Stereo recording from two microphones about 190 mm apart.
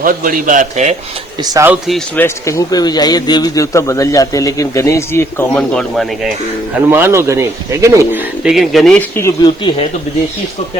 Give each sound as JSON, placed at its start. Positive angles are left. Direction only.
{"t": 0.0, "sound": "a man's voice", "side_deg": -45}
{"t": 1.5, "sound": "speech", "side_deg": -10}
{"t": 2.1, "sound": "a man's voice", "side_deg": 15}
{"t": 6.7, "sound": "speech", "side_deg": -10}
{"t": 8.4, "sound": "speech", "side_deg": 0}